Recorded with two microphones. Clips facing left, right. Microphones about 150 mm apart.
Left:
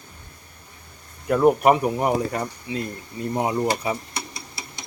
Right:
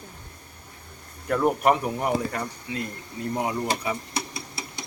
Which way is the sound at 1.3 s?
15° left (ahead or behind).